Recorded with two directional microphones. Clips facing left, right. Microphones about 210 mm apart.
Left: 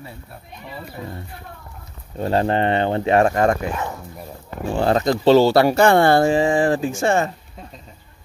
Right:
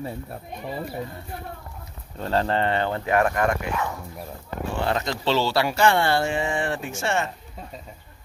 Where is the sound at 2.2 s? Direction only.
15° left (ahead or behind).